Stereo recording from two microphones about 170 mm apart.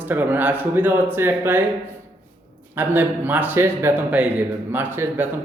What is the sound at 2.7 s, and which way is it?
A man's voice, 10° right (ahead or behind).